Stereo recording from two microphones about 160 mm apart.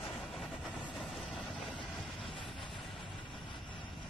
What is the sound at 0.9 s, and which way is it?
Vehicle, centre (ahead or behind).